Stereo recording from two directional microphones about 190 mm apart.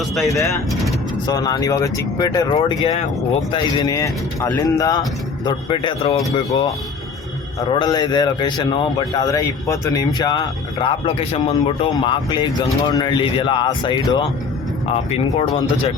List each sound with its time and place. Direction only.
1.3 s speech: 20° left (ahead or behind)